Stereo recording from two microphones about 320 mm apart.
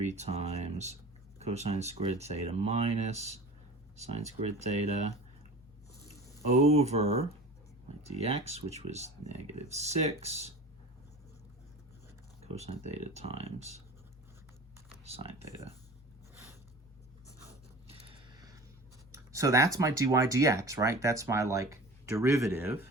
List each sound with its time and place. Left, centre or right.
0.0 s speech: right
6.6 s speech: centre
12.5 s speech: centre
14.8 s speech: centre
17.8 s a sound: centre
19.1 s speech: centre